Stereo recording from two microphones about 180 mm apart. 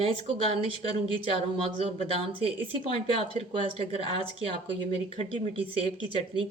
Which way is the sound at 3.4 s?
30° right (ahead or behind).